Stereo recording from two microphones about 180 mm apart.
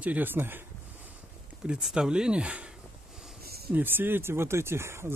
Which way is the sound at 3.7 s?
10° right (ahead or behind).